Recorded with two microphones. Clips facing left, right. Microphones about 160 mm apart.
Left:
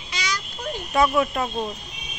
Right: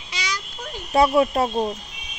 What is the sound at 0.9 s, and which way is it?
Speech, 30° right (ahead or behind).